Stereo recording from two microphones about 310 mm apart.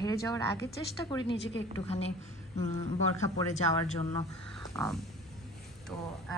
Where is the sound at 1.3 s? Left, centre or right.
Left.